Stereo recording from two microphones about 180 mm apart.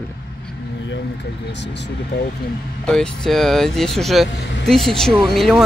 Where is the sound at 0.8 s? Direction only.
85° left.